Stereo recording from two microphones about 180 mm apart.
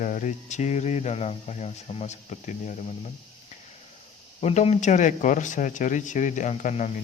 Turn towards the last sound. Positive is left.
turn(degrees=40)  # may be behind; listen again after turning